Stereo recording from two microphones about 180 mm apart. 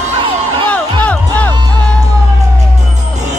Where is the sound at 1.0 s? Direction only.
10° left (ahead or behind).